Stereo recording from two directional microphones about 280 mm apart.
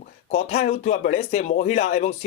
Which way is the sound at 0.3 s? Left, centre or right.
Left.